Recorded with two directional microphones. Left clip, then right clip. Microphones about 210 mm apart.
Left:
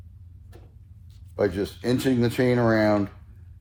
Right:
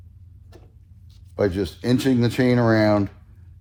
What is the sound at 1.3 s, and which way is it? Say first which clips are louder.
A man's voice: right 2 dB; 25° right (ahead or behind).